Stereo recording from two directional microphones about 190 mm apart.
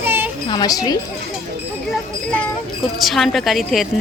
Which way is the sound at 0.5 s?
20° left (ahead or behind).